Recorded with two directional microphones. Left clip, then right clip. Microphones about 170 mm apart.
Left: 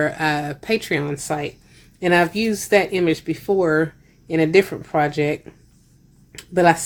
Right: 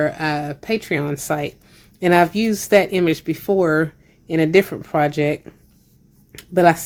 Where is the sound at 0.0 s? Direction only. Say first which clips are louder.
Even; 15° right (ahead or behind).